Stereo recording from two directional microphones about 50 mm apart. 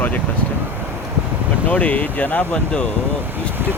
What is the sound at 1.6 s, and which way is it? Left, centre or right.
Speech, left.